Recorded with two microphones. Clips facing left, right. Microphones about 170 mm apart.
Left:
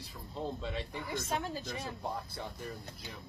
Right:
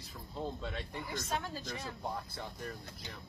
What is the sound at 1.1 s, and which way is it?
Speech, 15° left (ahead or behind).